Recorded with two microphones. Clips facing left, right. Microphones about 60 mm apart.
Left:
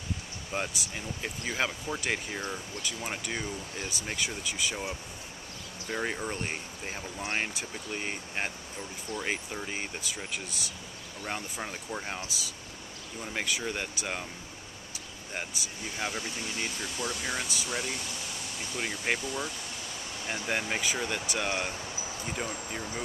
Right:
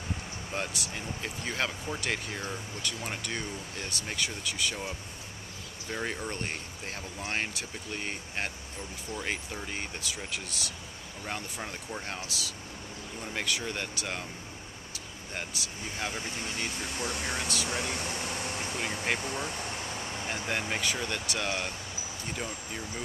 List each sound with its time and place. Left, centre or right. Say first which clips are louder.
0.6 s speech: left 1 dB; centre
5.9 s speech: left 2 dB; centre
13.2 s speech: left 1 dB; centre
15.3 s speech: left 1 dB; centre
16.8 s speech: even; right
17.4 s speech: right 2 dB; centre
17.6 s air conditioning: right 2 dB; right
19.1 s vehicle: right 1 dB; right
20.4 s speech: left 1 dB; centre